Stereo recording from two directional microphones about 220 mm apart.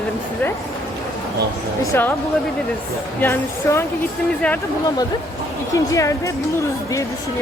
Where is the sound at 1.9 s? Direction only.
10° left (ahead or behind).